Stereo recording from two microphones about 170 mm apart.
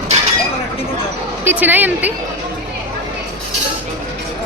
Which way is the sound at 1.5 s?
10° right (ahead or behind).